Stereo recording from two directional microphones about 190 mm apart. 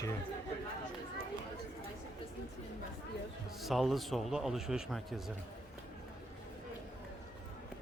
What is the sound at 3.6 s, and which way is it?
Speech, centre (ahead or behind).